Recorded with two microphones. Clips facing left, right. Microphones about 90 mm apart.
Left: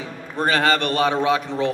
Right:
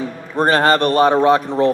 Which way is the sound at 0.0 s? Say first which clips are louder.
Right 6 dB; 45° right (ahead or behind).